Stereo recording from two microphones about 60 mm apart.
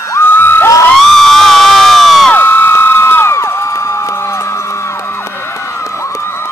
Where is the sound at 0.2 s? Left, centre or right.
Left.